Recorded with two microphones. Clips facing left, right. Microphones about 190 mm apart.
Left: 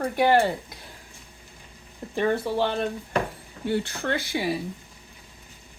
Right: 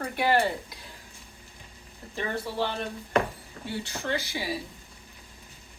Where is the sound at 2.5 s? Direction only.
55° left (ahead or behind).